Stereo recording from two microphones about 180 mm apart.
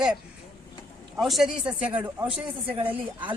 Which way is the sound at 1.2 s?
Centre (ahead or behind).